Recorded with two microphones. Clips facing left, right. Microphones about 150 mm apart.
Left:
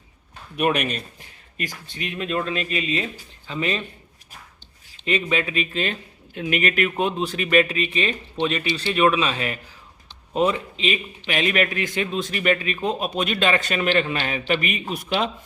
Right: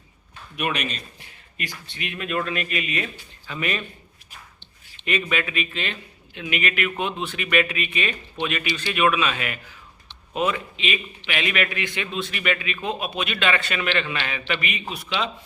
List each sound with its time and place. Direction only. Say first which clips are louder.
0.5 s a man's voice: left 5 dB; 45° left (ahead or behind)
1.5 s speech: left 3 dB; 40° left (ahead or behind); by 3.8 s 25° left (ahead or behind)
5.0 s a man's voice: left 2 dB; 30° left (ahead or behind); by 15.3 s 45° left (ahead or behind)